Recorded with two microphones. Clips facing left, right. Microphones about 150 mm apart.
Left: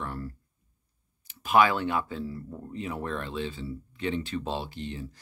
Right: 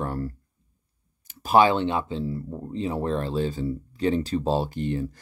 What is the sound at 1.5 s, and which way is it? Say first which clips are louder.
Speech: right 4 dB; 30° right (ahead or behind).